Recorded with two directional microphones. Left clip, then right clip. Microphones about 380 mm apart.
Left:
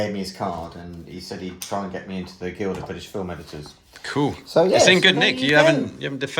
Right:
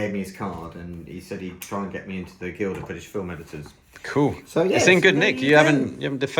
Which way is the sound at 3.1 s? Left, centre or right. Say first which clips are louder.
Even; centre.